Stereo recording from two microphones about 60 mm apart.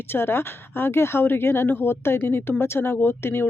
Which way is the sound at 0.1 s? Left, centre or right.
Left.